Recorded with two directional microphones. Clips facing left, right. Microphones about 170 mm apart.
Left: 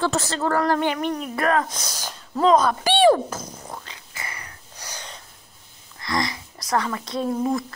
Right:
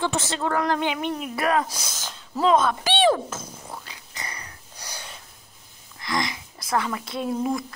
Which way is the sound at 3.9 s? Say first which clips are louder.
Left 1 dB; 20° right (ahead or behind).